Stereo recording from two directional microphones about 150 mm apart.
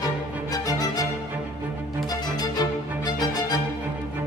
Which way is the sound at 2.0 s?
25° left (ahead or behind).